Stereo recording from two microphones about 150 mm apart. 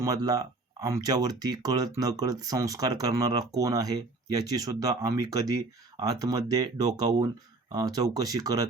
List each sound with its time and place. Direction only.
0.0 s speech: 25° right (ahead or behind)